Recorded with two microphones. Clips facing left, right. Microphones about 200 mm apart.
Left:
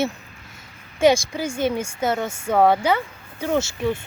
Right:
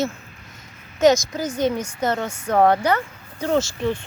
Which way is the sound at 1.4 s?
25° left (ahead or behind).